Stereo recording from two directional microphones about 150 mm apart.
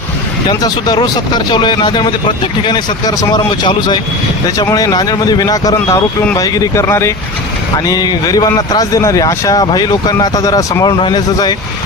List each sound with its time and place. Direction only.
0.4 s a man's voice: 25° left (ahead or behind)